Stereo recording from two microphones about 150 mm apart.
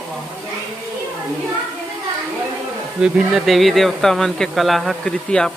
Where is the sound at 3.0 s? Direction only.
5° right (ahead or behind).